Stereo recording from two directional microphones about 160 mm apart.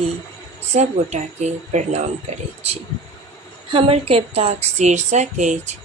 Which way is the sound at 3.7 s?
35° right (ahead or behind).